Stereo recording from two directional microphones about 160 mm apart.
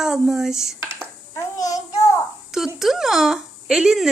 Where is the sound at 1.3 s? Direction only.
20° left (ahead or behind).